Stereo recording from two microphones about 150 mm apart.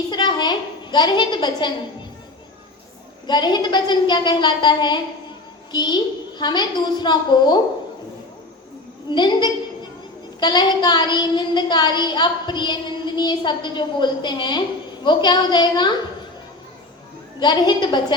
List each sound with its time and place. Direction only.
0.1 s a woman's voice: 30° left (ahead or behind)
3.2 s a woman's voice: 30° left (ahead or behind)
9.0 s a woman's voice: 30° left (ahead or behind)
17.4 s a woman's voice: 30° left (ahead or behind)